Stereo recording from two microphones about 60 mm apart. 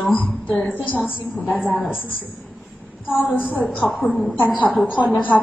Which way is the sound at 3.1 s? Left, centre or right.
Left.